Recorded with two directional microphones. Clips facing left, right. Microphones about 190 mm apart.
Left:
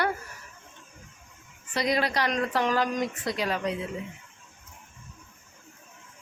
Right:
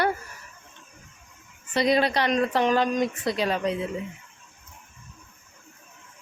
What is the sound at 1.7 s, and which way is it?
A woman's voice, 25° right (ahead or behind).